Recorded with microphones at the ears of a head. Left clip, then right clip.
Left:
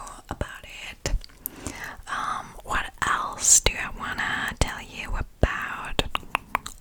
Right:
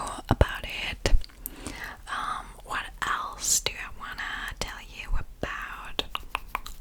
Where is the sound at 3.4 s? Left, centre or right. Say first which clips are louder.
Left 9 dB; left.